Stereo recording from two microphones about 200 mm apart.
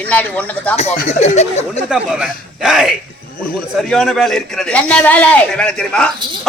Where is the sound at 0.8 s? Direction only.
35° left (ahead or behind).